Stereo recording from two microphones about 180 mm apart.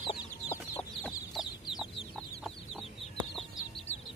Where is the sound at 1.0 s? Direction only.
Centre (ahead or behind).